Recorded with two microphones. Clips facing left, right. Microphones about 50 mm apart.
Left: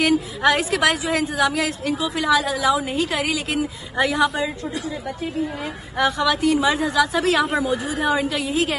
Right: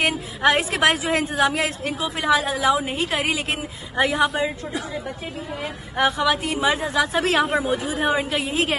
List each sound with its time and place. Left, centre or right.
0.0 s a woman's voice: right
5.9 s a woman's voice: right